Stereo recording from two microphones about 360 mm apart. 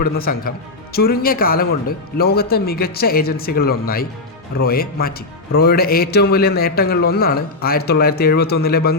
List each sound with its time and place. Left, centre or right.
0.0 s a man's voice: left